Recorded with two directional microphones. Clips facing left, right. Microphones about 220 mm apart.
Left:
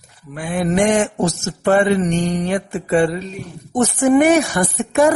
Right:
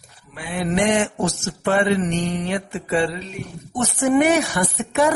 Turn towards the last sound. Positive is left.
turn(degrees=45)  # may be behind; listen again after turning